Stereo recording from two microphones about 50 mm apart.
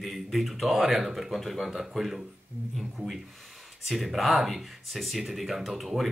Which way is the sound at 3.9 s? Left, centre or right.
Centre.